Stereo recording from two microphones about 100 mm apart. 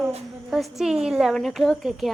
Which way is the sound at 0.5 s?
5° right (ahead or behind).